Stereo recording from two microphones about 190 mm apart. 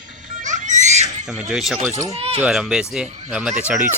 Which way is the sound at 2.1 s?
30° right (ahead or behind).